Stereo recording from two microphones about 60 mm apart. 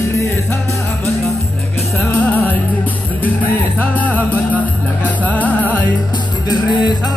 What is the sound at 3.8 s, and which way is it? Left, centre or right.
Music, left.